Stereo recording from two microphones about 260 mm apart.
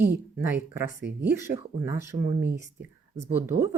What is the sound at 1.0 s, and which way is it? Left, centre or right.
Speech, right.